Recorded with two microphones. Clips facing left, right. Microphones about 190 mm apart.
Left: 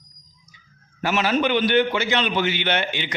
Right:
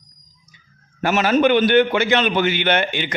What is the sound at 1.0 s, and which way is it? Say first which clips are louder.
A man's voice: right 5 dB; 50° right (ahead or behind).